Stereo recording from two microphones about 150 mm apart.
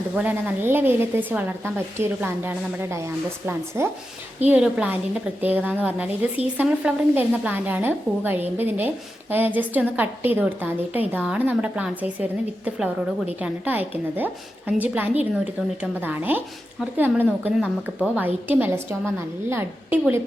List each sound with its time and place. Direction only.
0.2 s a woman's voice: 10° right (ahead or behind)